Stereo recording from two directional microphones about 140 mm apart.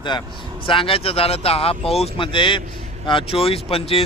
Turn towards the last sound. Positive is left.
turn(degrees=45)  # may be behind; listen again after turning